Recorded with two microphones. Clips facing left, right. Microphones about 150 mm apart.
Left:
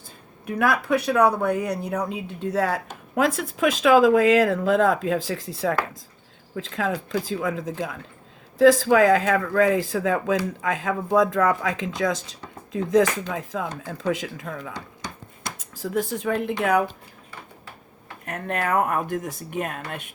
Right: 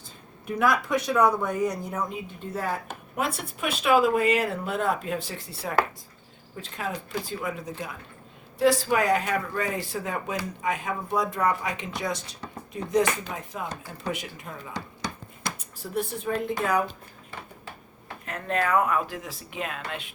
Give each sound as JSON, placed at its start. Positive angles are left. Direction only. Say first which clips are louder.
{"t": 0.6, "sound": "speech", "louder": "left 3 dB", "side_deg": 60}
{"t": 18.3, "sound": "speech", "louder": "left 1 dB", "side_deg": 55}